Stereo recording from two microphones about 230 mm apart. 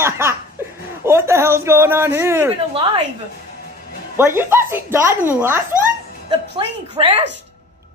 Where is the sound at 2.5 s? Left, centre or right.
Right.